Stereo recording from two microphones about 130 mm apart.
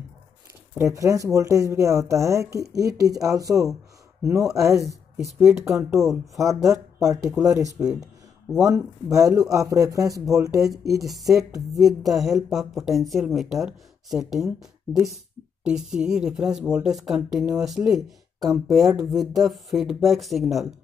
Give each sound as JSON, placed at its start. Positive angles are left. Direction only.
{"t": 0.7, "sound": "speech", "side_deg": -25}
{"t": 7.9, "sound": "a sound", "side_deg": -5}
{"t": 8.6, "sound": "speech", "side_deg": -25}
{"t": 11.1, "sound": "speech", "side_deg": 0}